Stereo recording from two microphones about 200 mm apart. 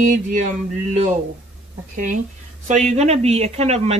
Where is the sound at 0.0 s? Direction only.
40° right (ahead or behind).